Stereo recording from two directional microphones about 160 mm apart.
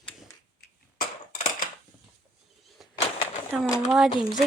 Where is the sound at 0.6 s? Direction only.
60° left (ahead or behind).